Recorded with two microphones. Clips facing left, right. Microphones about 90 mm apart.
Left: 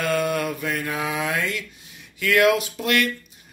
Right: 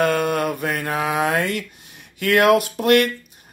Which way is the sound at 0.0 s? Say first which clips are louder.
Right 4 dB; 45° right (ahead or behind).